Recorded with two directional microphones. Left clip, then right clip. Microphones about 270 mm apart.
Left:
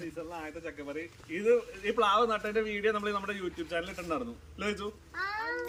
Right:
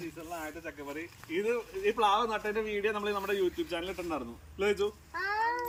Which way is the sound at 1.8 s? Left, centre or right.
Centre.